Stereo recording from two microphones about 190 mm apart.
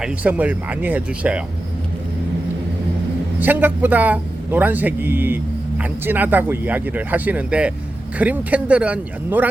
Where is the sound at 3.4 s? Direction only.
10° right (ahead or behind).